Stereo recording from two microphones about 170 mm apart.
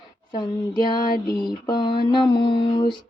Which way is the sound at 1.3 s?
25° left (ahead or behind).